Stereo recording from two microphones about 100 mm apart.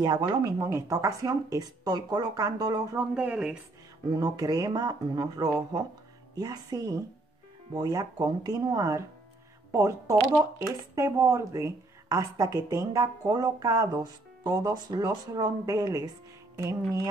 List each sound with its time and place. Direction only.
0.0 s speech: 40° right (ahead or behind)
3.0 s speech: 10° right (ahead or behind)
4.1 s speech: 40° right (ahead or behind)